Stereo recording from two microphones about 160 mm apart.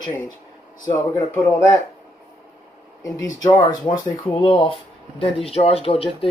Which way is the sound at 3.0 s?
25° left (ahead or behind).